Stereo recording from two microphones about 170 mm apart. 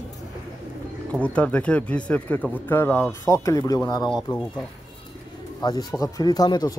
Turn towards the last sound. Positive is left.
turn(degrees=25)  # may be behind; listen again after turning